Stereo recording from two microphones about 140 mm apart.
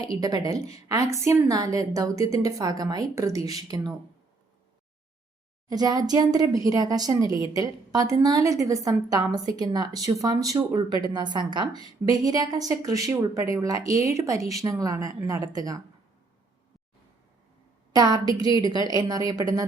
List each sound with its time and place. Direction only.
0.0 s a woman's voice: 25° right (ahead or behind)
5.6 s a woman's voice: 30° right (ahead or behind)
17.9 s a woman's voice: 25° right (ahead or behind)